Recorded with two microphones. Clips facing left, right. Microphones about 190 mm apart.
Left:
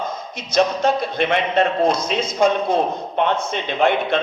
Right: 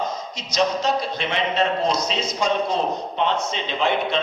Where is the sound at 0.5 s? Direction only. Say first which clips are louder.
Left 4 dB; 55° left (ahead or behind).